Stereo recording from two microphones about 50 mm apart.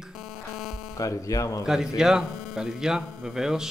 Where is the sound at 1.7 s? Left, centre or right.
Centre.